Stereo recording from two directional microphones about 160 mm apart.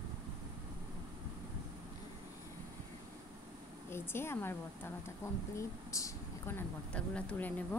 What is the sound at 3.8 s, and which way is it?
Speech, 15° left (ahead or behind).